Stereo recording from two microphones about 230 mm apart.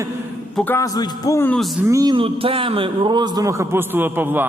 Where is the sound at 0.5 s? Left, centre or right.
Centre.